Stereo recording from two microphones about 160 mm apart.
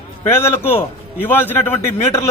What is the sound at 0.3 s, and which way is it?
A man's voice, 15° left (ahead or behind).